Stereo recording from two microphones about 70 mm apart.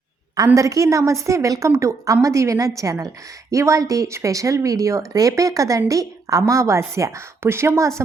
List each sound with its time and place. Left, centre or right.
0.5 s speech: right